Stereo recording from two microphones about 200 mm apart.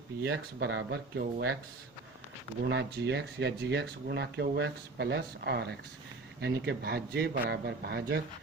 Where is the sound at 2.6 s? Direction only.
60° right (ahead or behind).